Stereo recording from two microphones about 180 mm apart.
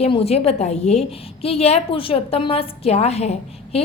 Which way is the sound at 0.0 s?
35° left (ahead or behind).